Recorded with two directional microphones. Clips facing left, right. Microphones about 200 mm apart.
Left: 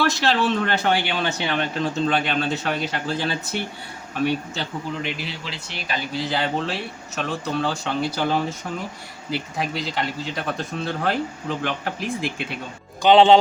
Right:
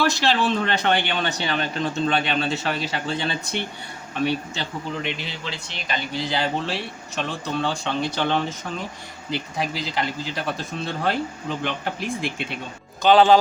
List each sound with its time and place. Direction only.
0.0 s speech: centre (ahead or behind)
13.0 s speech: 20° left (ahead or behind)